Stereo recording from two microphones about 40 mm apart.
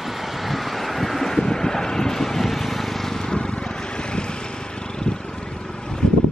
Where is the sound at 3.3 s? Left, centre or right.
Left.